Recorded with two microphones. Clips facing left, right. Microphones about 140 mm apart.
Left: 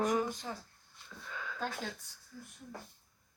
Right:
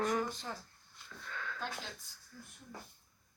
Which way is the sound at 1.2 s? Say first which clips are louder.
Even; 10° left (ahead or behind).